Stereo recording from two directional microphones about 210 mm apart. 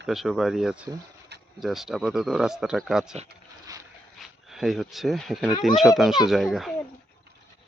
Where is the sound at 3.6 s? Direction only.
15° right (ahead or behind).